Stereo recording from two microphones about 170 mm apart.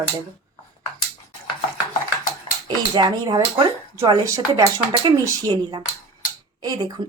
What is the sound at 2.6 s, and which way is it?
Speech, 25° right (ahead or behind).